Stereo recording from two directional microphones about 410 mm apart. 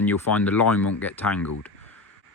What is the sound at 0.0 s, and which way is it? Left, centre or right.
Speech, centre.